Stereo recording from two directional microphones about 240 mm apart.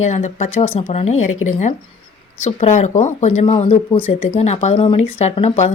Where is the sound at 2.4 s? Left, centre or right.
Left.